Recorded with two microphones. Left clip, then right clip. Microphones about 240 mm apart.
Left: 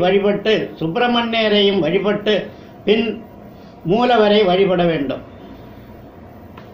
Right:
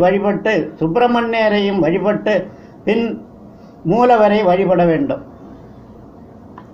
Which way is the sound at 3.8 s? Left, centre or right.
Right.